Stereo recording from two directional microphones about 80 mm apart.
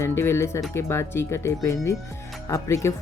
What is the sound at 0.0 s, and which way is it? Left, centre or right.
Speech, left.